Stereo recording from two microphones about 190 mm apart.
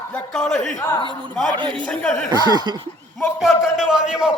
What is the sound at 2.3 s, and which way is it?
Speech, 20° right (ahead or behind).